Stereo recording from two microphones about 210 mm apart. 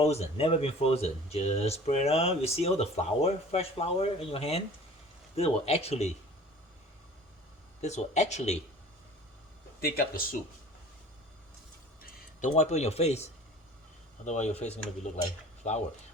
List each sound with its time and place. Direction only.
0.0 s speech: 30° left (ahead or behind)
7.8 s speech: 35° left (ahead or behind)
9.8 s speech: 45° left (ahead or behind)
12.4 s speech: 35° left (ahead or behind)